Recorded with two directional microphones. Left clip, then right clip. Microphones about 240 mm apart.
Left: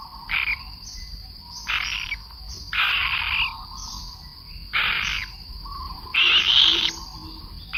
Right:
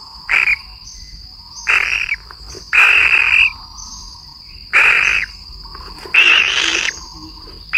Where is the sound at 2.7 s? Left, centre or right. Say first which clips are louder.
Right 12 dB; centre.